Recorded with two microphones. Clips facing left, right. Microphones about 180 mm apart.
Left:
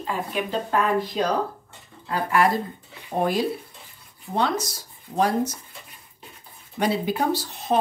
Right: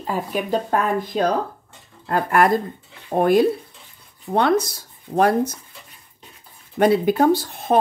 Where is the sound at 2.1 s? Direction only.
55° right (ahead or behind).